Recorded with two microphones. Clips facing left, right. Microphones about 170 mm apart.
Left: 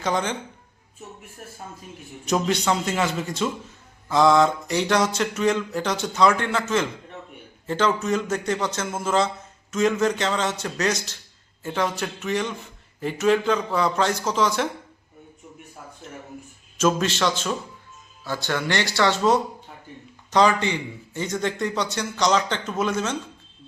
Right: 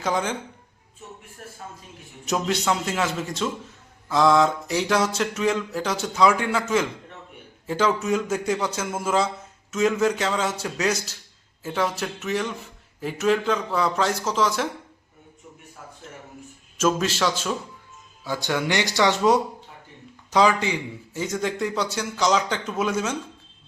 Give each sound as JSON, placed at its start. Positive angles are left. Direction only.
{"t": 0.0, "sound": "mantra", "side_deg": -5}
{"t": 2.2, "sound": "mantra", "side_deg": 0}
{"t": 7.7, "sound": "a man's voice", "side_deg": -5}
{"t": 11.6, "sound": "mantra", "side_deg": -5}
{"t": 16.7, "sound": "mantra", "side_deg": -5}
{"t": 18.3, "sound": "a man's voice", "side_deg": -15}